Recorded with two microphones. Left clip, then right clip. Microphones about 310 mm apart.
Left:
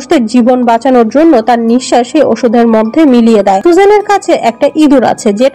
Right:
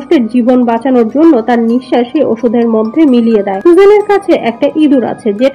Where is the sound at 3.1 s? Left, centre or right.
Left.